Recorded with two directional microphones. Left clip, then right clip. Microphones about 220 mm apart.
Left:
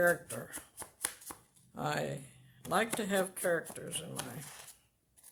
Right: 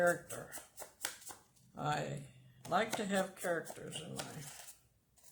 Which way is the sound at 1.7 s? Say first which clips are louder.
Left 2 dB; 40° left (ahead or behind).